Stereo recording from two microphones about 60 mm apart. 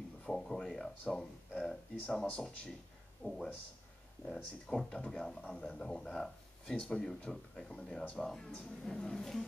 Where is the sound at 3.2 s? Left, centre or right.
Left.